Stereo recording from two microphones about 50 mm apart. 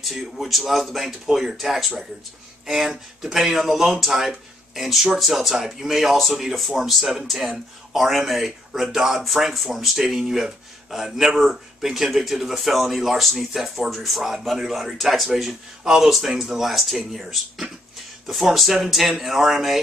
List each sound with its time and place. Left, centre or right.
0.0 s speech: centre
18.2 s speech: centre